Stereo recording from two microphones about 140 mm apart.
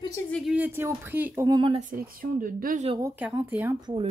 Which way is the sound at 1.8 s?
85° right.